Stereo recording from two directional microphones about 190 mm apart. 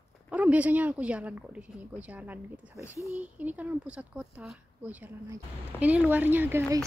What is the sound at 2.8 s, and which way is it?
Speech, 15° left (ahead or behind).